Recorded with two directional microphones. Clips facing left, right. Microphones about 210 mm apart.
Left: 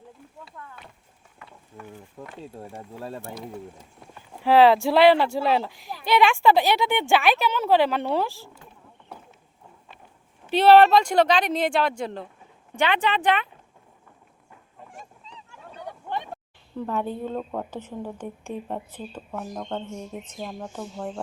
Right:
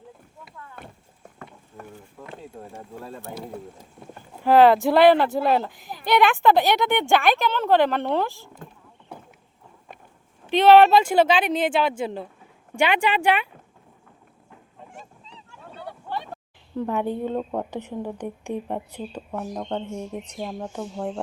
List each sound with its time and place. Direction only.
0.8 s clip-clop: 50° right (ahead or behind)
1.4 s a sound: 45° right (ahead or behind)
4.4 s speech: centre (ahead or behind)
10.5 s a woman's voice: centre (ahead or behind)
15.8 s a sound: 20° left (ahead or behind)
16.7 s a woman's voice: 15° right (ahead or behind)